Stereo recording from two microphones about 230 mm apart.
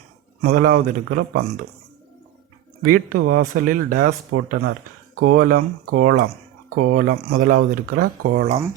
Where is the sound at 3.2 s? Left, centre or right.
Right.